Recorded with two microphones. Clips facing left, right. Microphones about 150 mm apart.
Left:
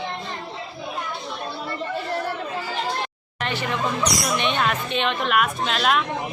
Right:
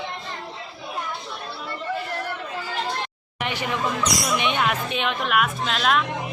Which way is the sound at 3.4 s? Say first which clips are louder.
Left 1 dB; 10° right (ahead or behind).